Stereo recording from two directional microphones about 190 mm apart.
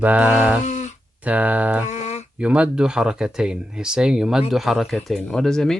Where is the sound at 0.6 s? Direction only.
40° left (ahead or behind).